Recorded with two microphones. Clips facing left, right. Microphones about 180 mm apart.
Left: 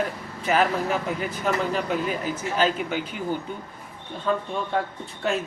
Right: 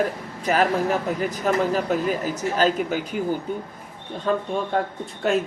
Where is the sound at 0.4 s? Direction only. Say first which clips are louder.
Right 2 dB; 40° right (ahead or behind).